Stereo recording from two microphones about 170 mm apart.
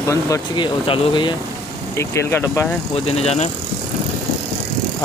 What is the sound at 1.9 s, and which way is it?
Speech, 15° left (ahead or behind).